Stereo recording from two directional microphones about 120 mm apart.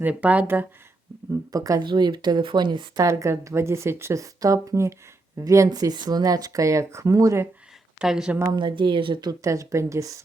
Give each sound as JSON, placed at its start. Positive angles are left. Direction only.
{"t": 0.0, "sound": "speech", "side_deg": -15}
{"t": 1.3, "sound": "speech", "side_deg": -30}
{"t": 3.0, "sound": "speech", "side_deg": -25}
{"t": 7.9, "sound": "speech", "side_deg": -5}
{"t": 8.4, "sound": "speech", "side_deg": -40}
{"t": 9.4, "sound": "speech", "side_deg": -25}